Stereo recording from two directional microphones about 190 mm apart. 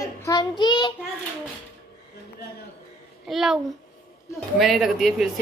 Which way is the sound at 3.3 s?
Centre (ahead or behind).